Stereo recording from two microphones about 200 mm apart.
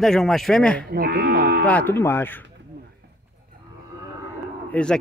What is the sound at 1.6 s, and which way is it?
Speech, 10° left (ahead or behind).